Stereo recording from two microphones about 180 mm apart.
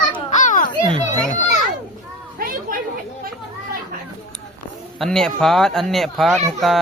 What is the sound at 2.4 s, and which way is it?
Chatter, 50° right (ahead or behind).